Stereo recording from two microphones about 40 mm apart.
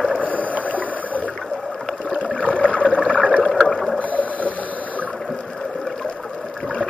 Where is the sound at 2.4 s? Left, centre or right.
Left.